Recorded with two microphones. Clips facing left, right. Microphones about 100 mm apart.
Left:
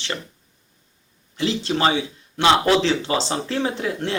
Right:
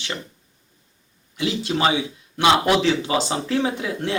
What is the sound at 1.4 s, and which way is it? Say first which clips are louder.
Speech: left 1 dB; 15° right (ahead or behind).